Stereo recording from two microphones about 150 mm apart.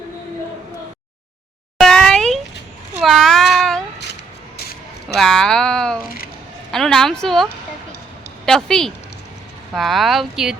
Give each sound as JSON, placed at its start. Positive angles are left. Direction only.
{"t": 1.8, "sound": "a sound", "side_deg": 5}
{"t": 3.0, "sound": "child singing", "side_deg": 0}
{"t": 5.0, "sound": "speech", "side_deg": 5}
{"t": 8.4, "sound": "speech", "side_deg": 5}